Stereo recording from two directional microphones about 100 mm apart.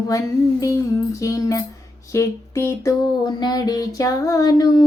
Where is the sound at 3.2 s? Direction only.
45° left (ahead or behind).